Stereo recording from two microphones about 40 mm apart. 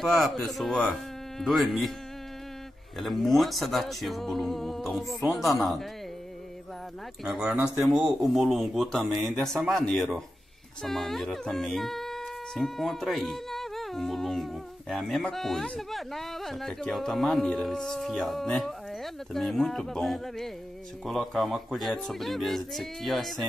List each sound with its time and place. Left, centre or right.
0.0 s speech: centre
3.0 s speech: centre
7.2 s speech: centre
7.9 s speech: right
8.3 s speech: centre
8.8 s speech: centre
9.9 s speech: centre
19.8 s speech: centre
21.0 s speech: centre